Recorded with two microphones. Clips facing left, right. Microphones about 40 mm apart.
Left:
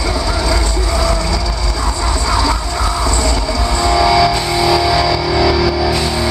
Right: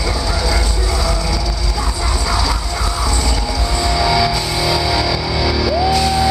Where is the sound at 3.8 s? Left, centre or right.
Left.